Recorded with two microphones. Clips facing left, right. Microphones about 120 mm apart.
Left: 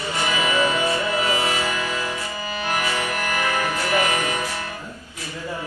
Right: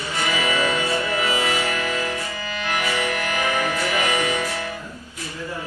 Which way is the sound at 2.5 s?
40° left (ahead or behind).